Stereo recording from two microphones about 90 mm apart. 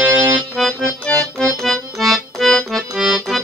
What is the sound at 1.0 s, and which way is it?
Accordion, 5° left (ahead or behind).